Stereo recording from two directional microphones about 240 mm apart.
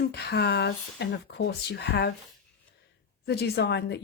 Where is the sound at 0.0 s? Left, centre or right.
Left.